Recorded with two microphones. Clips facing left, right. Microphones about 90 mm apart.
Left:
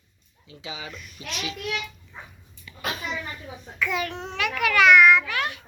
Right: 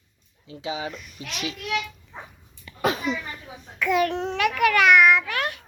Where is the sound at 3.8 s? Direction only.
55° right (ahead or behind).